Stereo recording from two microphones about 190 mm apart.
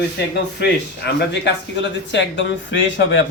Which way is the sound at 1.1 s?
60° left (ahead or behind).